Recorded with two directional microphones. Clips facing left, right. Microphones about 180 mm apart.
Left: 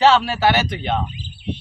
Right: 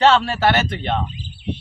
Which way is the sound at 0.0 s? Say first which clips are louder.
Even; 5° left (ahead or behind).